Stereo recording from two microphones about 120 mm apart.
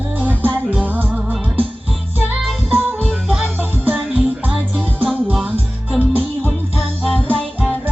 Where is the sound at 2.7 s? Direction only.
15° right (ahead or behind).